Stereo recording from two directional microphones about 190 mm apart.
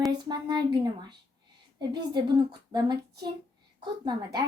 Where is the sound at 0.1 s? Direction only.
25° right (ahead or behind).